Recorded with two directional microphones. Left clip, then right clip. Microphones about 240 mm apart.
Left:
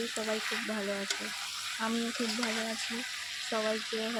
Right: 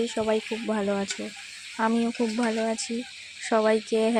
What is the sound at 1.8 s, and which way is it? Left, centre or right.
Speech, right.